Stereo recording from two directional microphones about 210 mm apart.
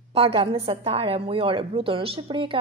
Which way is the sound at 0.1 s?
25° right (ahead or behind).